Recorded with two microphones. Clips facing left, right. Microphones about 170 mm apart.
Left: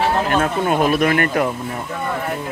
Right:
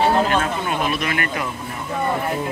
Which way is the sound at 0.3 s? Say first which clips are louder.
Left 4 dB; 45° left (ahead or behind).